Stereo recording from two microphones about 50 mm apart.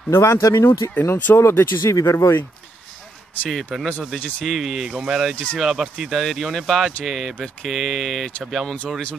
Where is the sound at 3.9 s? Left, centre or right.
Left.